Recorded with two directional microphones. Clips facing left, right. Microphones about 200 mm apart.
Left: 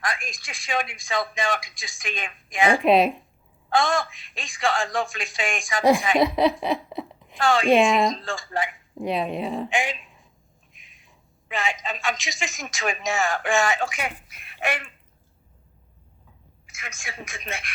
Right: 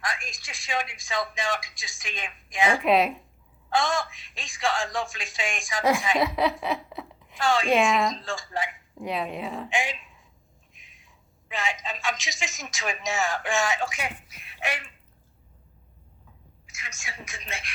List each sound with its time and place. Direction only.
0.0 s speech: 55° left (ahead or behind)
2.8 s speech: 25° left (ahead or behind)
3.7 s speech: 55° left (ahead or behind)
6.1 s a woman's voice: 25° left (ahead or behind)
7.3 s speech: 55° left (ahead or behind)
7.7 s speech: 30° left (ahead or behind)
8.2 s speech: 55° left (ahead or behind)
9.0 s speech: 25° left (ahead or behind)
9.6 s speech: 55° left (ahead or behind)
11.4 s speech: 55° left (ahead or behind)
16.6 s speech: 55° left (ahead or behind)